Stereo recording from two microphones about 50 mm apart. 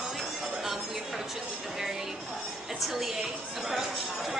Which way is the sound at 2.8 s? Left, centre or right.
Centre.